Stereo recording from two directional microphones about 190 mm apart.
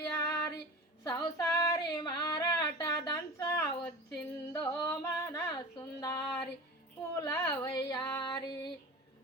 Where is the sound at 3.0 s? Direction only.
20° left (ahead or behind).